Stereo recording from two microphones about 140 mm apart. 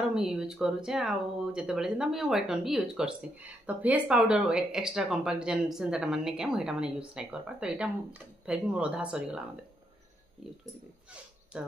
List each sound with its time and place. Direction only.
0.1 s speech: 5° right (ahead or behind)
11.5 s speech: 5° right (ahead or behind)